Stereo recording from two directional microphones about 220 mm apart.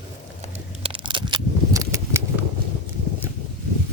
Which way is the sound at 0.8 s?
25° right (ahead or behind).